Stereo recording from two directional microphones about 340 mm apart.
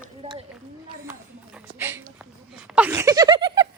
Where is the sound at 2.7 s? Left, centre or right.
Centre.